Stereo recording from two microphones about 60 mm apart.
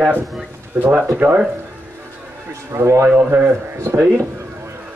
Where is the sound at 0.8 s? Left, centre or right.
Right.